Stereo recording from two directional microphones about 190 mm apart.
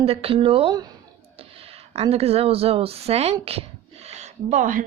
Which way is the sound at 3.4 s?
30° right (ahead or behind).